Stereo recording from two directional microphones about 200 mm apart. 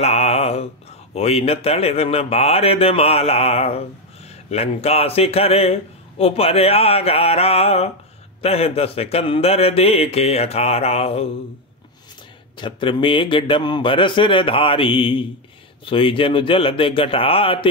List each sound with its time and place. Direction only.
0.0 s mantra: 30° left (ahead or behind)
1.1 s speech: 30° left (ahead or behind)
12.5 s speech: 25° left (ahead or behind)